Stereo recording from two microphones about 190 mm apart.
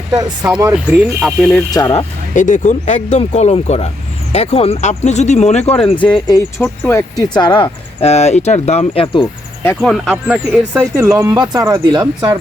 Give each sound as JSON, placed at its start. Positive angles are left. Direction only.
{"t": 0.1, "sound": "speech", "side_deg": -20}
{"t": 0.7, "sound": "speech", "side_deg": -5}
{"t": 1.7, "sound": "speech", "side_deg": 25}
{"t": 2.3, "sound": "speech", "side_deg": 40}
{"t": 6.6, "sound": "speech", "side_deg": 15}
{"t": 7.3, "sound": "speech", "side_deg": 25}
{"t": 9.2, "sound": "speech", "side_deg": 10}
{"t": 9.9, "sound": "speech", "side_deg": -5}